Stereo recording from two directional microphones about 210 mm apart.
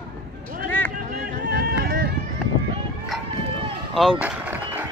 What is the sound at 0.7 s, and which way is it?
Run, 10° left (ahead or behind).